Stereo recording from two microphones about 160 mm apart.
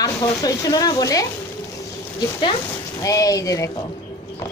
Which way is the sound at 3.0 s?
20° left (ahead or behind).